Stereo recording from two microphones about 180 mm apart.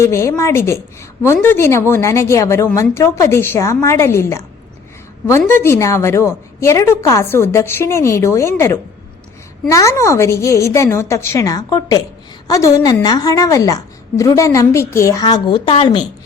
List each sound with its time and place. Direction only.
0.0 s a woman's voice: 15° left (ahead or behind)